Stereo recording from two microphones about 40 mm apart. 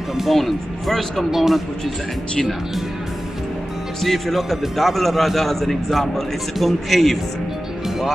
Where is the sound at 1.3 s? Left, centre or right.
Centre.